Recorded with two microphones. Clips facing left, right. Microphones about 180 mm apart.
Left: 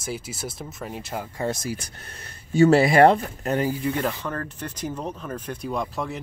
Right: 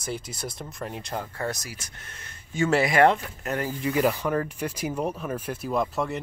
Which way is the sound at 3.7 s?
Centre (ahead or behind).